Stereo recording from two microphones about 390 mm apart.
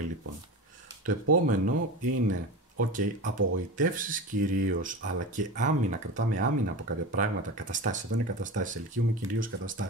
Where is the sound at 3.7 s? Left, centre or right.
Centre.